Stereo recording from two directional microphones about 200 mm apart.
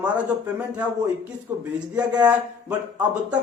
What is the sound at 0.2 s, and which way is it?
Speech, 5° right (ahead or behind).